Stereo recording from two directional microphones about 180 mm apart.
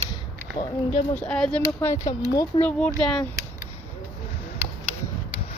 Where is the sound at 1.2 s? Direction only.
5° left (ahead or behind).